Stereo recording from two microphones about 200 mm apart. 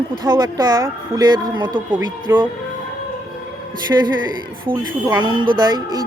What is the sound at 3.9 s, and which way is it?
Speech, 10° right (ahead or behind).